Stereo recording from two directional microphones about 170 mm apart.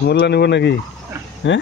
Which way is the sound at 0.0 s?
75° left (ahead or behind).